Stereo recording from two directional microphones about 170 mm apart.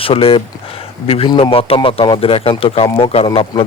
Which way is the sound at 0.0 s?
35° left (ahead or behind).